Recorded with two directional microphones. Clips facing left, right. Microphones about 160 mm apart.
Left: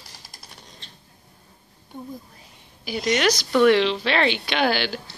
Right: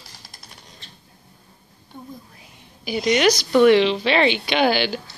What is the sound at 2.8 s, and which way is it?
A woman's voice, centre (ahead or behind).